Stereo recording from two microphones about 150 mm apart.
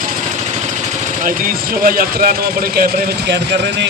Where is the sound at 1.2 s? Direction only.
65° right (ahead or behind).